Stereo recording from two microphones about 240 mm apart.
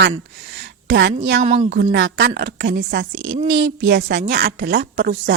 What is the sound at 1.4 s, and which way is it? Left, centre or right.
Speech, right.